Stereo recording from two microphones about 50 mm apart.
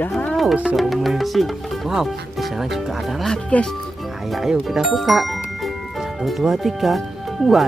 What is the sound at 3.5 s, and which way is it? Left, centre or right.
Speech, left.